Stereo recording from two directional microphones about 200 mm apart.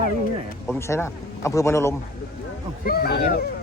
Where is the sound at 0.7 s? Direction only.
15° left (ahead or behind).